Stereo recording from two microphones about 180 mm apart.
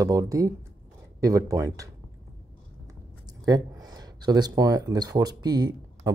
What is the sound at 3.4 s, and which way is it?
Speech, 20° right (ahead or behind).